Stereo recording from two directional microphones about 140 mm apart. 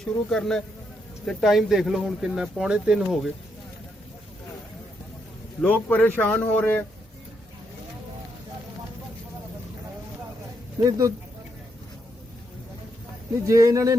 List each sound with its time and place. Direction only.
0.0 s speech: 5° left (ahead or behind)
5.6 s speech: 10° left (ahead or behind)
10.8 s a man's voice: 25° right (ahead or behind)
13.4 s a man's voice: 25° right (ahead or behind)